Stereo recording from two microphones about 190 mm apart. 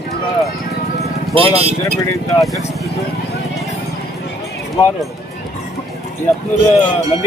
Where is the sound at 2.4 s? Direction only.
Centre (ahead or behind).